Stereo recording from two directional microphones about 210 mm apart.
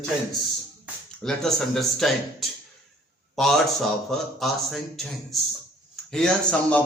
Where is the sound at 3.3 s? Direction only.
Centre (ahead or behind).